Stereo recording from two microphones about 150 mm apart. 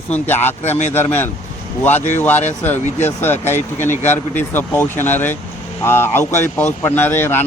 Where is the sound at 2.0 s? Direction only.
50° left (ahead or behind).